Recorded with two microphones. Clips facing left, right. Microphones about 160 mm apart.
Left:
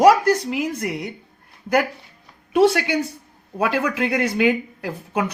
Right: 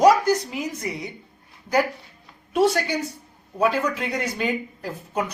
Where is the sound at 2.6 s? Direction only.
65° left (ahead or behind).